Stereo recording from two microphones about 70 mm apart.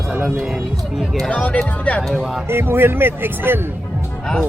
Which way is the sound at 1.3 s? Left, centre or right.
Centre.